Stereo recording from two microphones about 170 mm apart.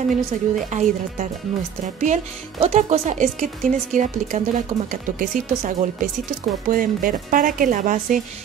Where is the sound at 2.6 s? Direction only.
40° right (ahead or behind).